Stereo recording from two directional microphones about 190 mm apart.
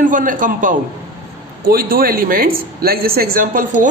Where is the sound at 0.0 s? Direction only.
45° right (ahead or behind).